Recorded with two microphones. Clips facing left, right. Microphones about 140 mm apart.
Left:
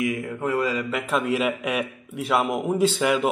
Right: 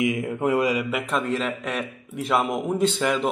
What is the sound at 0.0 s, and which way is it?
Mantra, 20° right (ahead or behind).